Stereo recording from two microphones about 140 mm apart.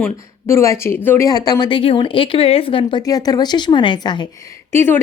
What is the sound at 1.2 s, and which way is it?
A woman's voice, 30° left (ahead or behind).